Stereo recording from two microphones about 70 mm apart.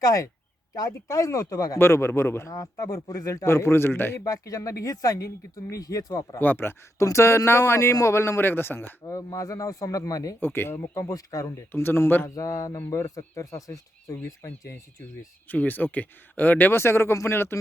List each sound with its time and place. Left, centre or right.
0.0 s speech: left
1.8 s speech: left
2.5 s speech: left
3.4 s speech: left
4.3 s speech: left
6.4 s speech: left
7.0 s speech: left
9.0 s speech: left
10.4 s speech: left
10.9 s speech: left
11.7 s speech: left
12.3 s speech: left
15.4 s speech: left
16.7 s speech: left